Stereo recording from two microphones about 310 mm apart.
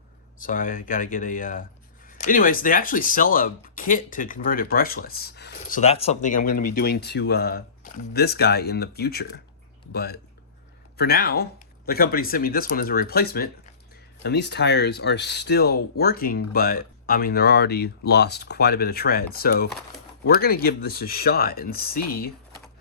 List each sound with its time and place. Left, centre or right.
0.3 s speech: left